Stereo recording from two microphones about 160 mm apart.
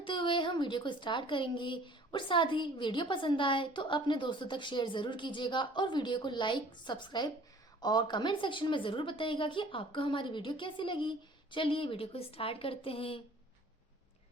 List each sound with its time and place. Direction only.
0.0 s speech: 30° left (ahead or behind)